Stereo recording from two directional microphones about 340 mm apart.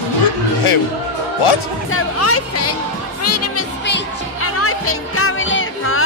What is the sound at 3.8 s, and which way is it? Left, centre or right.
Music, left.